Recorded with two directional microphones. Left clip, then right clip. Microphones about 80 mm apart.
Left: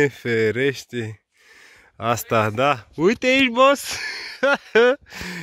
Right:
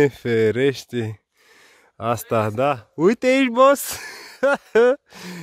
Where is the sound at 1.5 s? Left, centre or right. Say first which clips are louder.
Left 3 dB; right.